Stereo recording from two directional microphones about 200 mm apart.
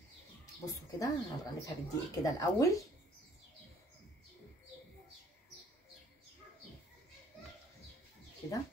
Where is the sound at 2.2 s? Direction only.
15° left (ahead or behind).